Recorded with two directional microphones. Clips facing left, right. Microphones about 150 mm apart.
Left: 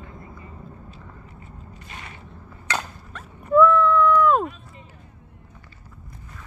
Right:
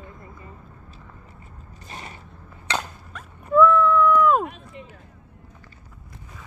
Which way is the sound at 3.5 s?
Centre (ahead or behind).